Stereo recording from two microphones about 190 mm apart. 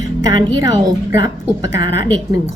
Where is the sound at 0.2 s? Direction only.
20° right (ahead or behind).